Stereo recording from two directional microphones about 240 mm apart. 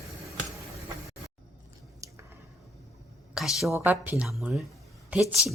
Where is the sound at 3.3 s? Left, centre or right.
Centre.